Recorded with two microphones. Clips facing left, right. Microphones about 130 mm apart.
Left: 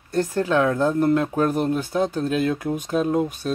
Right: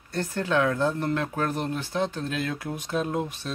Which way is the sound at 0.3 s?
35° left (ahead or behind).